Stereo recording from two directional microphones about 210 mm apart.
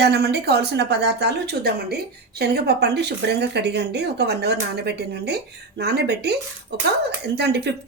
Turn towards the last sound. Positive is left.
turn(degrees=-50)  # may be behind; listen again after turning